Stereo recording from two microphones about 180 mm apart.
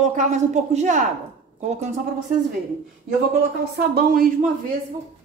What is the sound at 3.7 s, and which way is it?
Speech, 60° right (ahead or behind).